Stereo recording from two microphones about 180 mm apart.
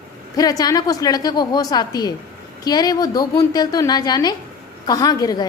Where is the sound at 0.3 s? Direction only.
20° left (ahead or behind).